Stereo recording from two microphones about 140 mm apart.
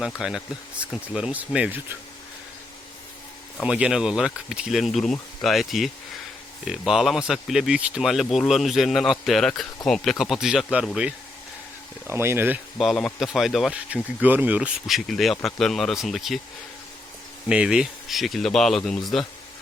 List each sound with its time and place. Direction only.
0.0 s speech: 5° right (ahead or behind)
3.6 s speech: 5° right (ahead or behind)
12.0 s speech: 15° right (ahead or behind)
12.8 s speech: centre (ahead or behind)
17.5 s speech: 5° right (ahead or behind)